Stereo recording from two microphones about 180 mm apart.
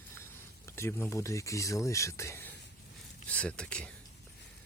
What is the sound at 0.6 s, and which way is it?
Speech, 15° left (ahead or behind).